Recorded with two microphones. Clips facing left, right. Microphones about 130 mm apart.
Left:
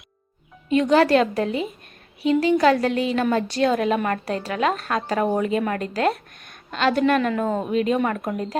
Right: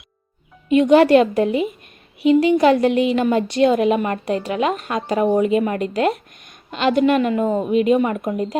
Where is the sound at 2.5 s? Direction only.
20° right (ahead or behind).